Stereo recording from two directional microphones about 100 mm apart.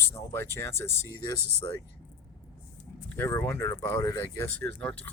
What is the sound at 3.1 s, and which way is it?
Speech, 25° left (ahead or behind).